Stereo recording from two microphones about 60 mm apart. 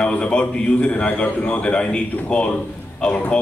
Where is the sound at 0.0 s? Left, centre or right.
Centre.